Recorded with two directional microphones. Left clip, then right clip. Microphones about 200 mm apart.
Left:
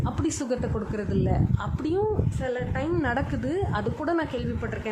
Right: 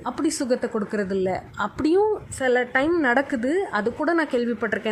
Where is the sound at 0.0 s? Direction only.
10° right (ahead or behind).